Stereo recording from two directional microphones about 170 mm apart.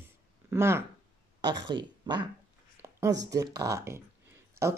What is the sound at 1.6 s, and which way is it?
Speech, 25° right (ahead or behind).